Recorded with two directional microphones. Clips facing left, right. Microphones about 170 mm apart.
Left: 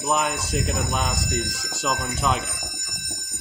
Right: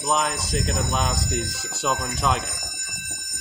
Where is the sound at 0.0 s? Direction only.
5° left (ahead or behind).